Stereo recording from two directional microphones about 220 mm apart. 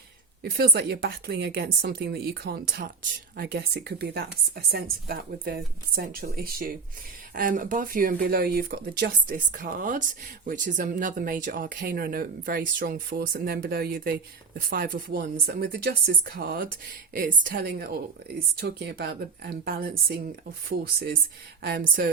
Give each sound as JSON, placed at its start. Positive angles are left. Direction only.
{"t": 0.5, "sound": "a woman's voice", "side_deg": -45}
{"t": 21.6, "sound": "speech", "side_deg": -45}